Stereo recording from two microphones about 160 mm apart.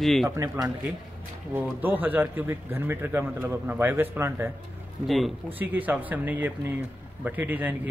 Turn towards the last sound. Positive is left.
turn(degrees=-10)  # may be behind; listen again after turning